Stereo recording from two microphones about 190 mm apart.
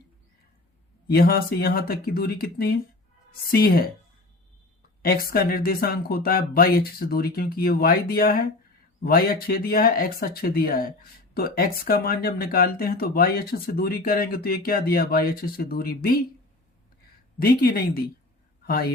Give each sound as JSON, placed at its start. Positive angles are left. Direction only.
{"t": 1.0, "sound": "speech", "side_deg": 50}
{"t": 5.0, "sound": "speech", "side_deg": 50}
{"t": 17.4, "sound": "a woman's voice", "side_deg": 50}